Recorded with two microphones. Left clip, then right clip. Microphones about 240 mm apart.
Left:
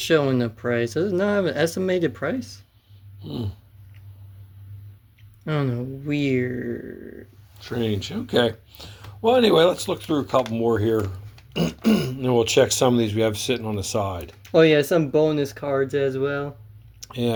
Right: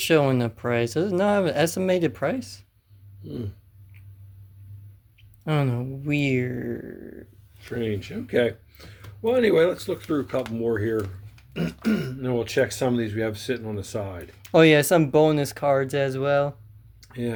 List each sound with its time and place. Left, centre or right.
0.0 s speech: centre
5.5 s speech: centre
7.6 s speech: left
14.4 s speech: right
17.0 s a sound: left